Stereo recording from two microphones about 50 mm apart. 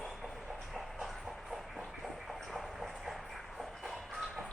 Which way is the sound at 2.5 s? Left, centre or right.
Centre.